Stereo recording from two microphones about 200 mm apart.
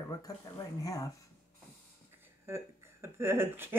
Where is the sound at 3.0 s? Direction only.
10° right (ahead or behind).